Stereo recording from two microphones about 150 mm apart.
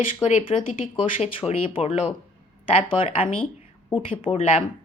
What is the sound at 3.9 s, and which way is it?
Speech, 40° left (ahead or behind).